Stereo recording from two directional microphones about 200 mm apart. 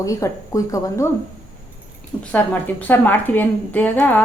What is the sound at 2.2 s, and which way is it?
A woman's voice, 5° left (ahead or behind).